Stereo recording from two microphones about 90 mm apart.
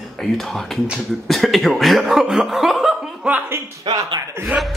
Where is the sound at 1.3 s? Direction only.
Centre (ahead or behind).